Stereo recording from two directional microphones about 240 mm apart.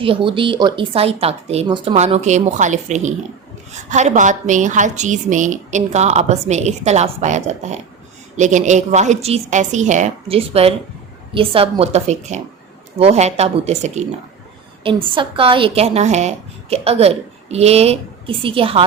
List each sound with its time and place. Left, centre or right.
0.0 s speech: right